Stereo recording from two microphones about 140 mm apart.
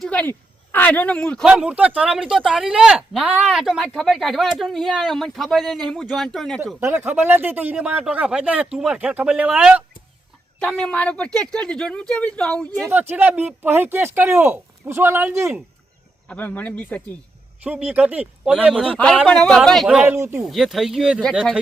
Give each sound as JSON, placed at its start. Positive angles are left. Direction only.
{"t": 0.0, "sound": "a sound", "side_deg": 10}
{"t": 1.5, "sound": "speech", "side_deg": -5}
{"t": 6.7, "sound": "speech", "side_deg": -15}
{"t": 10.6, "sound": "speech", "side_deg": 5}
{"t": 12.9, "sound": "speech", "side_deg": -15}
{"t": 16.3, "sound": "speech", "side_deg": 10}
{"t": 17.6, "sound": "speech", "side_deg": -10}
{"t": 18.9, "sound": "speech", "side_deg": 5}
{"t": 20.1, "sound": "speech", "side_deg": -20}
{"t": 20.5, "sound": "speech", "side_deg": 0}